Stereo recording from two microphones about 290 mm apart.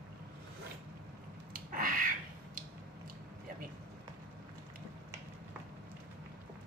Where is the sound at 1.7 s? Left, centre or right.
Right.